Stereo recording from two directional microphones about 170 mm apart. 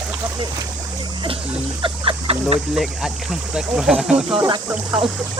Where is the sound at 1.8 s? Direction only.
30° right (ahead or behind).